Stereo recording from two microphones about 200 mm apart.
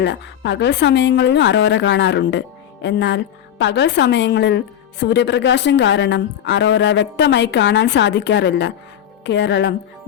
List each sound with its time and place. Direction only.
0.0 s a woman's voice: 60° left (ahead or behind)